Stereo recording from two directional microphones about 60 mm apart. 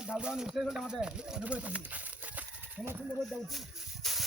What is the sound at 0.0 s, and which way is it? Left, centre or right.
Speech, centre.